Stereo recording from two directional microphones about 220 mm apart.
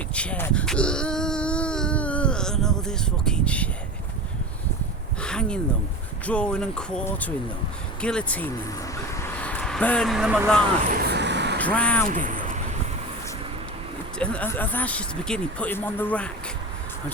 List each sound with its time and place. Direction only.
0.1 s a sound: 5° left (ahead or behind)
5.2 s a sound: 5° left (ahead or behind)
6.2 s speech: 5° left (ahead or behind)
11.1 s vehicle: 50° right (ahead or behind)
11.6 s speech: 5° left (ahead or behind)
12.0 s speech: 35° right (ahead or behind)
14.2 s speech: 5° left (ahead or behind)